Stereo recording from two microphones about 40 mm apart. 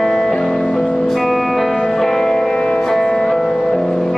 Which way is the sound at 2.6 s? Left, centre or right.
Left.